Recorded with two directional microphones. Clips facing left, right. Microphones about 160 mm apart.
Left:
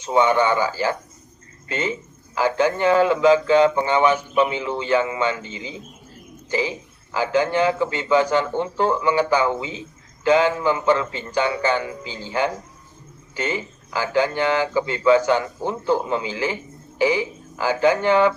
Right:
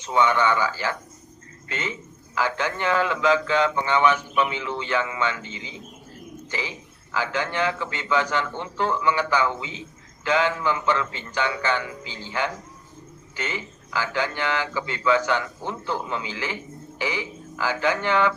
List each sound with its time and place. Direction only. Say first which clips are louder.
0.0 s a man's voice: left 3 dB; 40° left (ahead or behind)